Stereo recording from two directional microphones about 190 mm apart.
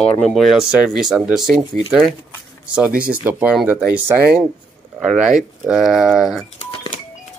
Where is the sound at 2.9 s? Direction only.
50° right (ahead or behind).